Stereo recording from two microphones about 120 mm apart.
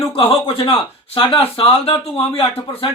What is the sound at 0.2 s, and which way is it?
Speech, 50° left (ahead or behind).